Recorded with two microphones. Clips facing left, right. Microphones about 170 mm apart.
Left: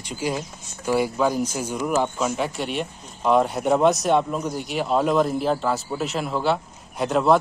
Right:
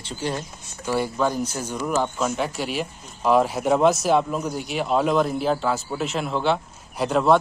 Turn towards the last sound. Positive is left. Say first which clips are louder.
# even
turn(degrees=0)  # may be behind; listen again after turning